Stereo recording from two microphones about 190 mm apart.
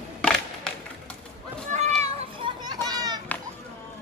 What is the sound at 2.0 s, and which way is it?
Children playing, 30° right (ahead or behind).